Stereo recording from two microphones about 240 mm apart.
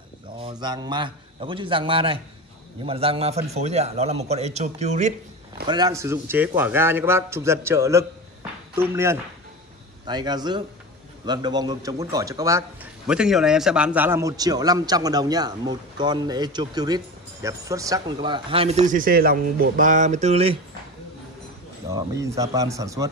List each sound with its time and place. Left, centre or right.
0.4 s a man's voice: centre
5.7 s a man's voice: centre
21.9 s a man's voice: centre